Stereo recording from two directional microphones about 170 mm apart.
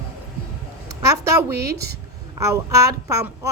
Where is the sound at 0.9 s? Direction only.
15° right (ahead or behind).